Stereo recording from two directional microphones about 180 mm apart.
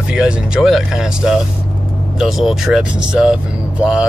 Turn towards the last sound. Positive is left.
turn(degrees=-5)  # may be behind; listen again after turning